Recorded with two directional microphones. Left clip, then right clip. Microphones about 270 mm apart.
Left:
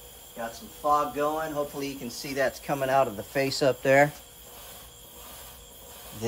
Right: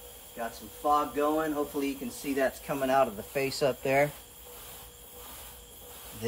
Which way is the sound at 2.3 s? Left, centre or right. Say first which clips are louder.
Left 3 dB; left.